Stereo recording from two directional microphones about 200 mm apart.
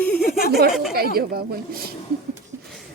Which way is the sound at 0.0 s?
5° left (ahead or behind).